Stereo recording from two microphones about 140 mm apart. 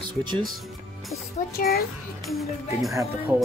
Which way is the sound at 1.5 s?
90° left.